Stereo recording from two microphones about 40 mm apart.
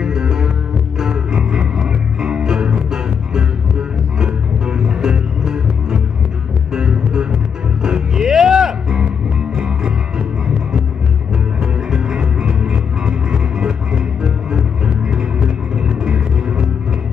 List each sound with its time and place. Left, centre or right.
0.0 s music: centre
11.6 s music: centre